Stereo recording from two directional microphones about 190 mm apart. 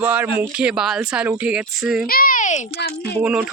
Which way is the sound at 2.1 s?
50° left (ahead or behind).